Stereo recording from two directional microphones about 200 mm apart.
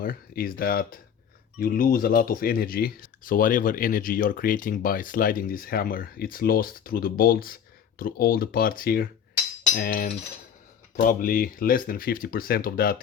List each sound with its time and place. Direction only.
0.0 s speech: 45° left (ahead or behind)